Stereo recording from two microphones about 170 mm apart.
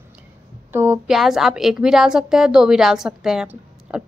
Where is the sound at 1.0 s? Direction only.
Centre (ahead or behind).